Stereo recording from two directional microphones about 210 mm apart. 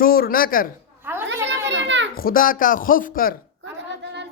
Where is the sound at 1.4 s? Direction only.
60° right (ahead or behind).